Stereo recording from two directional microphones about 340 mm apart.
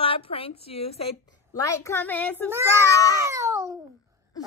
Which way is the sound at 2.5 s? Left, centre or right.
Centre.